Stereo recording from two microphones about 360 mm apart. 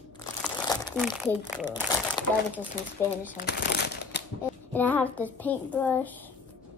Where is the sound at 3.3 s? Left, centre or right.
Left.